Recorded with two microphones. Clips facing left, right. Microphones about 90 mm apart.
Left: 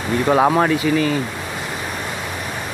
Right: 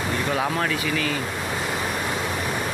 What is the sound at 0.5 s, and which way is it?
Speech, 30° left (ahead or behind).